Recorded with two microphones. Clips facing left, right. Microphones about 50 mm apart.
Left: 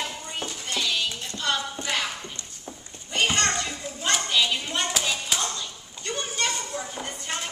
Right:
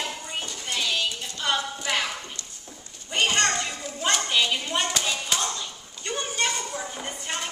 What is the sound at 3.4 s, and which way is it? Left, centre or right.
Children playing, right.